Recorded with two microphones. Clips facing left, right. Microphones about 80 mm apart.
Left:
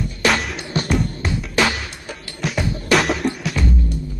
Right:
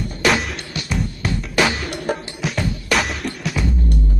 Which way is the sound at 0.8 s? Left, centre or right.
Centre.